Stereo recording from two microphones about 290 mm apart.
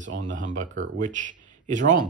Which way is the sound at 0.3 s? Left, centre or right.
Right.